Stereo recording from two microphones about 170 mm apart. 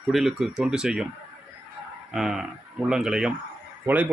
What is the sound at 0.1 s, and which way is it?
Speech, centre (ahead or behind).